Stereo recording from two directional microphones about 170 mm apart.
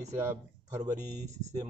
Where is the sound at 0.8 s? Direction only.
40° right (ahead or behind).